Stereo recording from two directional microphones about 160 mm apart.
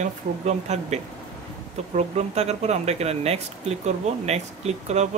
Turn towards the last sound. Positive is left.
turn(degrees=-45)  # may be behind; listen again after turning